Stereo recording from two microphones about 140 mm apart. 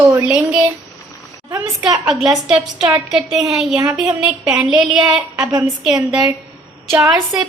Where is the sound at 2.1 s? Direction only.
Centre (ahead or behind).